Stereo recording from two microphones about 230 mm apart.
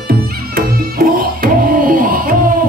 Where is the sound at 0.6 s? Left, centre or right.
Right.